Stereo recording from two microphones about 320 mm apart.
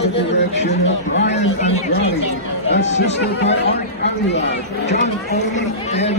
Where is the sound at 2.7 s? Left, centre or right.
Left.